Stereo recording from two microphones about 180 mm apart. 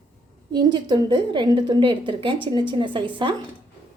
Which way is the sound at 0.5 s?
25° right (ahead or behind).